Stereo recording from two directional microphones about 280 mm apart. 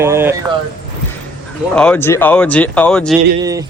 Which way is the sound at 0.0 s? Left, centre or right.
Centre.